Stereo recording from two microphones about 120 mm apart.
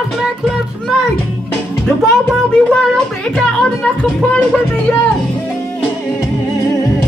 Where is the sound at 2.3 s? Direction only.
5° left (ahead or behind).